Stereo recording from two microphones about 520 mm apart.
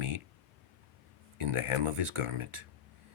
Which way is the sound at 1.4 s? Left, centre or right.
Right.